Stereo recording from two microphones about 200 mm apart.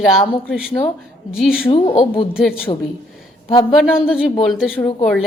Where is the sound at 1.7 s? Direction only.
25° left (ahead or behind).